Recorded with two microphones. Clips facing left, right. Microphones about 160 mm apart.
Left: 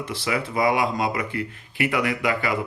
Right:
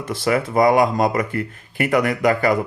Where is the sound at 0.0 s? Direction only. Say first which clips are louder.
Right 6 dB; 45° right (ahead or behind).